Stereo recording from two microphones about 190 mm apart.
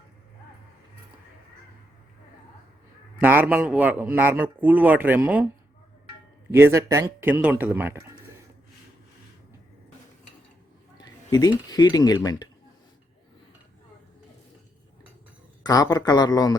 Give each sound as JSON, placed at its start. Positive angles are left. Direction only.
{"t": 3.2, "sound": "a man's voice", "side_deg": -10}
{"t": 6.5, "sound": "a man's voice", "side_deg": -15}
{"t": 10.9, "sound": "speech", "side_deg": 20}
{"t": 15.6, "sound": "a man's voice", "side_deg": 20}